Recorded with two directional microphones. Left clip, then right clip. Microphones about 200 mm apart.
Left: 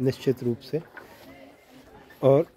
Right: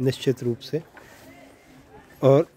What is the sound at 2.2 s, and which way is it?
Speech, 25° right (ahead or behind).